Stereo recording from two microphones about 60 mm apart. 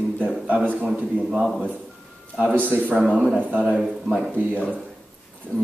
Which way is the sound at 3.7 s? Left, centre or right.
Centre.